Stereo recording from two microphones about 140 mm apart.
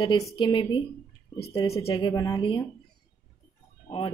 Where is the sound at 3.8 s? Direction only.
40° left (ahead or behind).